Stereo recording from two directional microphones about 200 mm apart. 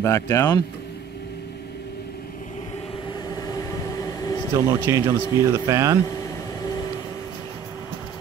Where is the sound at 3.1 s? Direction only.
20° left (ahead or behind).